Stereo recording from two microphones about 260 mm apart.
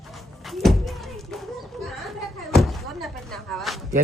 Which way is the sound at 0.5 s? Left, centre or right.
Centre.